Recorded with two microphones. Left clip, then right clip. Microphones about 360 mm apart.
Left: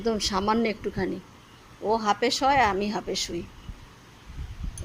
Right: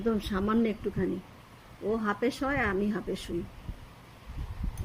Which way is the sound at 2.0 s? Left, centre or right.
Centre.